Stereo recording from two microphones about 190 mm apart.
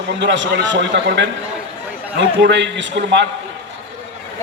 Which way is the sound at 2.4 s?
70° right (ahead or behind).